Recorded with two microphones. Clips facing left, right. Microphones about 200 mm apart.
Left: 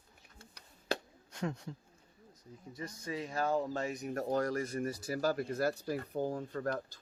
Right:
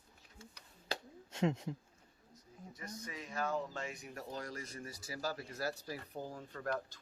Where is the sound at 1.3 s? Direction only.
25° right (ahead or behind).